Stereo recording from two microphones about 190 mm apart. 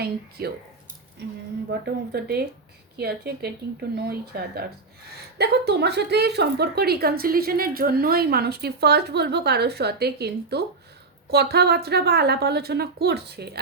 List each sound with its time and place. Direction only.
0.0 s a woman's voice: 55° right (ahead or behind)
1.8 s a woman's voice: 55° right (ahead or behind)